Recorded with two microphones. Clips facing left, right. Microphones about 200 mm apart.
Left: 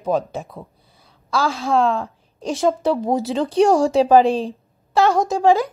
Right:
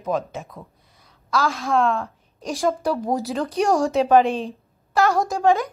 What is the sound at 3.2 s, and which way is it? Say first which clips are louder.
Speech: left 6 dB; 30° left (ahead or behind).